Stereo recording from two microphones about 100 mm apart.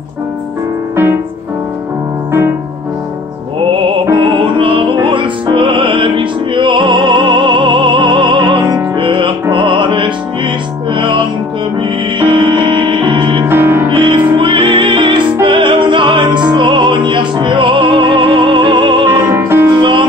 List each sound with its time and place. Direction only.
3.7 s music: 60° right (ahead or behind)
13.5 s music: 25° right (ahead or behind)
13.8 s music: 60° right (ahead or behind)
19.0 s music: 25° right (ahead or behind)
19.8 s music: 55° right (ahead or behind)